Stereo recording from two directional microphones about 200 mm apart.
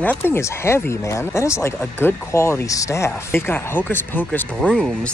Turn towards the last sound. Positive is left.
turn(degrees=5)  # may be behind; listen again after turning